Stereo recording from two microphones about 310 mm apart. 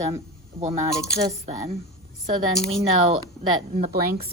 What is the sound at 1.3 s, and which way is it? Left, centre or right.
A woman's voice, centre.